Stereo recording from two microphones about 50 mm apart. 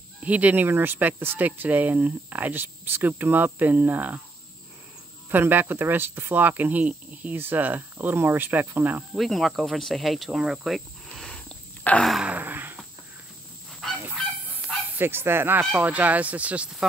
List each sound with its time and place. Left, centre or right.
0.2 s speech: right
0.7 s speech: right
5.3 s speech: right
7.3 s speech: right
9.1 s speech: centre
11.1 s a sound: centre
11.9 s a sound: left
12.3 s a sound: right
13.7 s goose: centre
15.0 s speech: right
15.7 s speech: right